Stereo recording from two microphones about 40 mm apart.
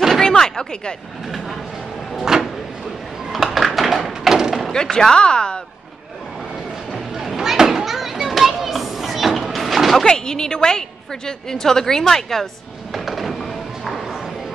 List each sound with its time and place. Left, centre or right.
0.2 s a sound: centre
2.1 s a sound: centre
3.5 s tap: centre
4.9 s speech: centre
6.9 s children playing: centre
10.0 s a woman's voice: centre
12.9 s music: centre